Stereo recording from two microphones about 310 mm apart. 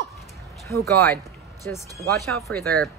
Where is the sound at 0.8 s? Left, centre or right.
Centre.